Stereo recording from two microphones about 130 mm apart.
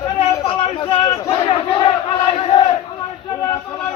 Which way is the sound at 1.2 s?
35° left (ahead or behind).